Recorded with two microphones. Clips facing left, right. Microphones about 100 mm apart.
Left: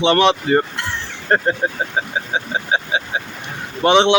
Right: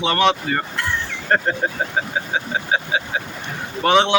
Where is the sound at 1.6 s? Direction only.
15° left (ahead or behind).